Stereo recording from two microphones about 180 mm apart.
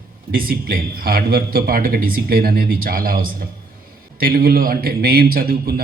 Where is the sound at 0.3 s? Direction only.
55° right (ahead or behind).